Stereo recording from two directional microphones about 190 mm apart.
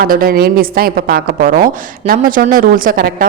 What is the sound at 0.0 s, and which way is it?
A woman's voice, 50° right (ahead or behind).